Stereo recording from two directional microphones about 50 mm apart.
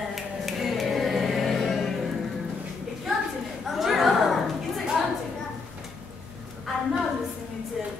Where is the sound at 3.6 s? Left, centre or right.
Centre.